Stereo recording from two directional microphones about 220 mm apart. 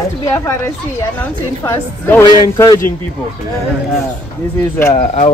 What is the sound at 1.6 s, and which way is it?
Speech, 10° left (ahead or behind).